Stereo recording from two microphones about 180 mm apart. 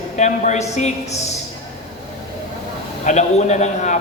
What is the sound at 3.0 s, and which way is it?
Speech, 40° left (ahead or behind).